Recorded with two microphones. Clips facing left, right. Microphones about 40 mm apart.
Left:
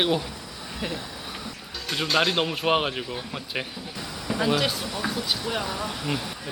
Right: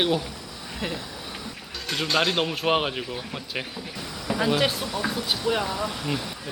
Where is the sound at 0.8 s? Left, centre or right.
Centre.